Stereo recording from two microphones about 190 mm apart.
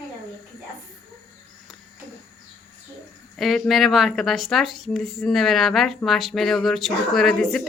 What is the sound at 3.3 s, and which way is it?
Speech, centre (ahead or behind).